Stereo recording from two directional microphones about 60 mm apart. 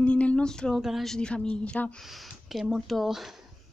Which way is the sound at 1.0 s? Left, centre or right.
Centre.